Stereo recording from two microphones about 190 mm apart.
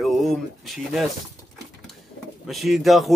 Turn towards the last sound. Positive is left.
turn(degrees=0)  # may be behind; listen again after turning